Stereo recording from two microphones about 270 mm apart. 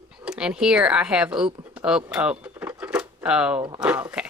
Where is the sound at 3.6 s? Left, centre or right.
Centre.